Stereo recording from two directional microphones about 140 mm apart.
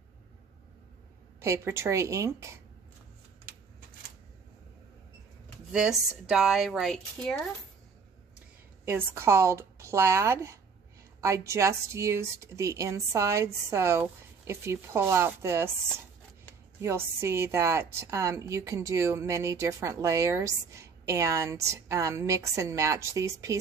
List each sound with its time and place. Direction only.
1.4 s speech: 20° right (ahead or behind)
5.7 s speech: 5° right (ahead or behind)
8.8 s speech: 20° right (ahead or behind)
16.8 s speech: 20° right (ahead or behind)